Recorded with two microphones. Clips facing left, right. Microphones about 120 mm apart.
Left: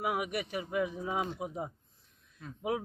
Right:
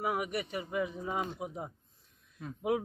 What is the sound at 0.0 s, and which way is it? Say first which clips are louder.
Speech: even; 5° left (ahead or behind).